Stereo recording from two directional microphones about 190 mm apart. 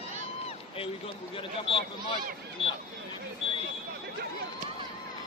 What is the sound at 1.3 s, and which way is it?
Speech, 30° left (ahead or behind).